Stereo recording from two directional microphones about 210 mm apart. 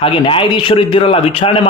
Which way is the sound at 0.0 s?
25° left (ahead or behind).